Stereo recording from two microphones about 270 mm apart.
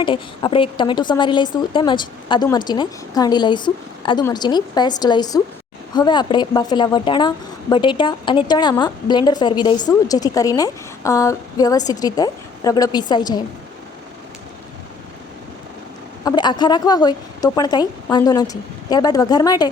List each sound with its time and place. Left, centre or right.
0.0 s a woman's voice: centre
16.2 s a woman's voice: centre